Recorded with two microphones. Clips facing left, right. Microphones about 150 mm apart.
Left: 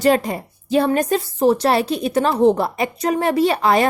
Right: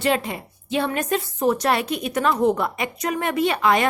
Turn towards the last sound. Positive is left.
turn(degrees=35)  # may be behind; listen again after turning